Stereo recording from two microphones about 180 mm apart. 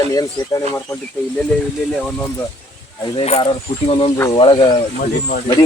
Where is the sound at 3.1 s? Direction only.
30° left (ahead or behind).